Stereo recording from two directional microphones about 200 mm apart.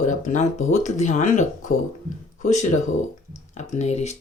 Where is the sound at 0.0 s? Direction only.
35° left (ahead or behind).